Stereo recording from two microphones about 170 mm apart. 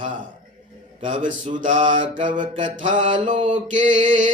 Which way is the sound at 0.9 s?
45° right (ahead or behind).